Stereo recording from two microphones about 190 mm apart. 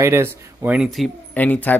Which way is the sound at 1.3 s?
10° left (ahead or behind).